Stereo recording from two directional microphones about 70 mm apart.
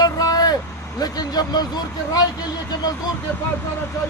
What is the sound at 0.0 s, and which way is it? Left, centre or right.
Vehicle, left.